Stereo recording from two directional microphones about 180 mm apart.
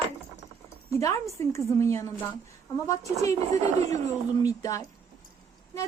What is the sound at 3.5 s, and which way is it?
Speech, 40° right (ahead or behind).